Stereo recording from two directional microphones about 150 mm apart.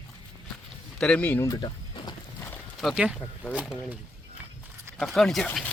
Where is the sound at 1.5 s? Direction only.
30° left (ahead or behind).